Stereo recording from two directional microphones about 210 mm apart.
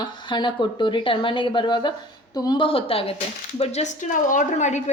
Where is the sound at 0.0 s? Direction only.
20° left (ahead or behind).